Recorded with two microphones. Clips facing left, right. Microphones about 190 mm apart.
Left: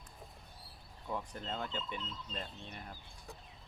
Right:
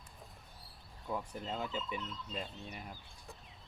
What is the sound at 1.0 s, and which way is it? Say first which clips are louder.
Speech: right 1 dB; 5° right (ahead or behind).